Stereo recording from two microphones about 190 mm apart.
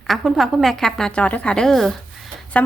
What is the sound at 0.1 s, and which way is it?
A woman's voice, centre (ahead or behind).